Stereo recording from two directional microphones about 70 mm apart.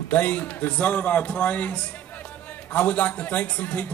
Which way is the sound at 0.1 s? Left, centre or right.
Left.